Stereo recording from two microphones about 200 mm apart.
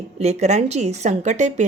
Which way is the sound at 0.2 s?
35° right (ahead or behind).